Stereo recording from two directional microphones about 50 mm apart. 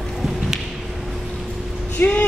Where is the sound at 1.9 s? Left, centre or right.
Left.